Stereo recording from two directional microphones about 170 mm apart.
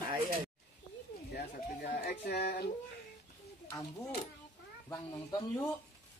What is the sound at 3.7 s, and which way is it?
Speech, 20° left (ahead or behind).